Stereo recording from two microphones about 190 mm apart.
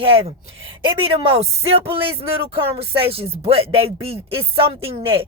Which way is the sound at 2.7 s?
30° right (ahead or behind).